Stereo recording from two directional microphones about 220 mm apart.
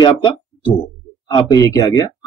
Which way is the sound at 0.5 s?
5° left (ahead or behind).